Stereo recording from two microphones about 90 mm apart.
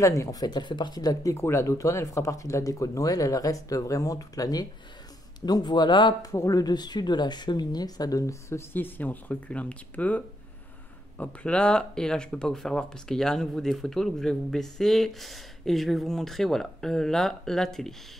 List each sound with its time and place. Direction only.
0.0 s speech: 35° left (ahead or behind)
1.3 s speech: 30° left (ahead or behind); by 6.1 s 60° left (ahead or behind)
6.3 s speech: 40° left (ahead or behind); by 17.9 s 5° left (ahead or behind)